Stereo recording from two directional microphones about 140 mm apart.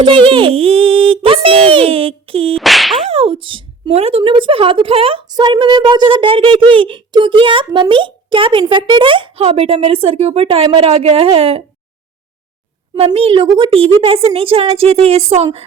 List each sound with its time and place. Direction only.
0.0 s a child's voice: 35° right (ahead or behind)
2.6 s whip: centre (ahead or behind)
3.1 s a child's voice: 45° right (ahead or behind)
5.3 s a child's voice: 30° right (ahead or behind)
13.1 s a child's voice: 40° right (ahead or behind)